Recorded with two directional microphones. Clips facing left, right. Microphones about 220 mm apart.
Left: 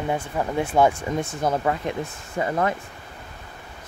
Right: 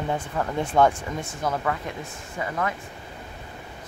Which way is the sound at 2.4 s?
35° left (ahead or behind).